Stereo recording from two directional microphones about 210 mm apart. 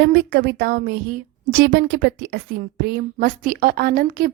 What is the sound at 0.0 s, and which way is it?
A woman's voice, 55° right (ahead or behind).